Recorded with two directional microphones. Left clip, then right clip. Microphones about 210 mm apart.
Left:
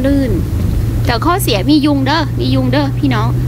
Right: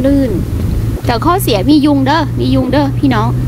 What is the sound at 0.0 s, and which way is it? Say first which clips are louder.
Vehicle: right 3 dB; 10° right (ahead or behind).